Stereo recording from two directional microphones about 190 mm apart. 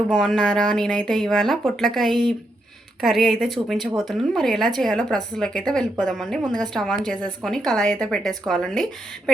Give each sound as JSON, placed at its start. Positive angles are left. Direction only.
{"t": 0.1, "sound": "a woman's voice", "side_deg": 5}